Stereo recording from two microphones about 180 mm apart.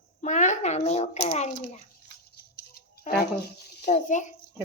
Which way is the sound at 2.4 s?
60° left (ahead or behind).